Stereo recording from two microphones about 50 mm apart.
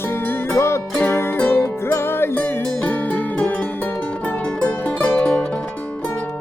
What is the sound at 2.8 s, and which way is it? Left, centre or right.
Music, left.